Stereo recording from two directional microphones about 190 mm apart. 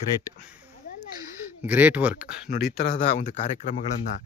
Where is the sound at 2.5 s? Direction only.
50° left (ahead or behind).